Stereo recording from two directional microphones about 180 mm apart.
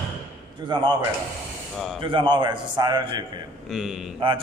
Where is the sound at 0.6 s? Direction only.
25° right (ahead or behind).